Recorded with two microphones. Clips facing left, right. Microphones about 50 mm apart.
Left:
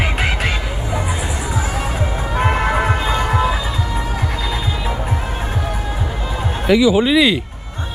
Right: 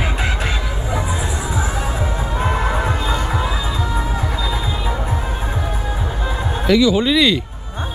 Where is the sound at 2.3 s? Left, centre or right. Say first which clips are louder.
Left 4 dB; left.